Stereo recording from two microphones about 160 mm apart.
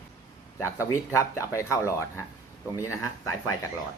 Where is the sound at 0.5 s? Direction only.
15° left (ahead or behind).